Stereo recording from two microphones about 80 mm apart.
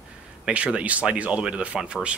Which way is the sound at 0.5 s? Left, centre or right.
Centre.